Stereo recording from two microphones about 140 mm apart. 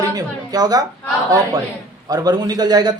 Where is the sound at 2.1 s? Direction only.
30° right (ahead or behind).